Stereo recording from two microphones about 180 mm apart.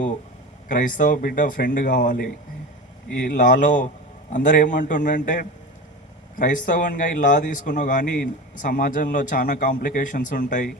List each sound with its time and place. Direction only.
0.7 s a man's voice: 50° left (ahead or behind)